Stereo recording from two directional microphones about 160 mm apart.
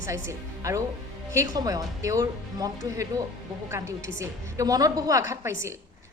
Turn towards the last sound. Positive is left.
turn(degrees=-15)  # may be behind; listen again after turning